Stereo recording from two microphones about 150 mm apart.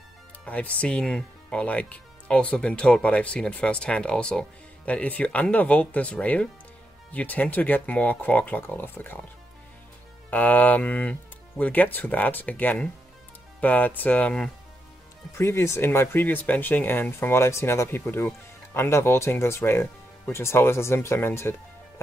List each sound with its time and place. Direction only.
0.5 s speech: 10° left (ahead or behind)
10.3 s speech: 10° left (ahead or behind)
15.3 s speech: 20° left (ahead or behind)